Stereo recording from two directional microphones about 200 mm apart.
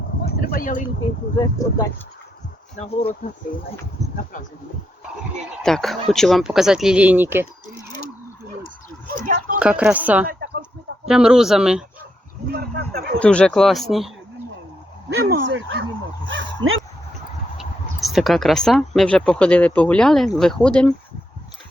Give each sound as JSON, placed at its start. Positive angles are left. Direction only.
{"t": 0.3, "sound": "a sound", "side_deg": 50}
{"t": 1.4, "sound": "speech", "side_deg": 15}
{"t": 2.7, "sound": "speech", "side_deg": 30}
{"t": 5.6, "sound": "speech", "side_deg": 0}
{"t": 9.2, "sound": "speech", "side_deg": -40}
{"t": 9.6, "sound": "speech", "side_deg": -5}
{"t": 10.2, "sound": "a sound", "side_deg": -55}
{"t": 11.1, "sound": "speech", "side_deg": -5}
{"t": 12.5, "sound": "a sound", "side_deg": -50}
{"t": 13.1, "sound": "speech", "side_deg": 5}
{"t": 15.1, "sound": "speech", "side_deg": -55}
{"t": 18.0, "sound": "speech", "side_deg": 0}